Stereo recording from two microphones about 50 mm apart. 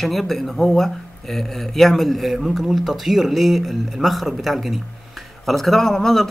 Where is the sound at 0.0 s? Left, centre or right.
Centre.